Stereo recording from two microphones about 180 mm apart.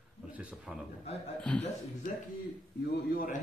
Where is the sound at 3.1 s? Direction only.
45° left (ahead or behind).